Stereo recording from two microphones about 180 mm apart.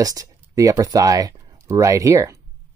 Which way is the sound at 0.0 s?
20° right (ahead or behind).